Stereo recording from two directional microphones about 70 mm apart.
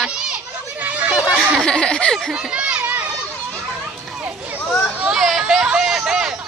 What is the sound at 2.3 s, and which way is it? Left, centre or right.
Speech, centre.